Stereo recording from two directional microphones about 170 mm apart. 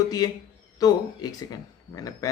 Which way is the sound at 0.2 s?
20° left (ahead or behind).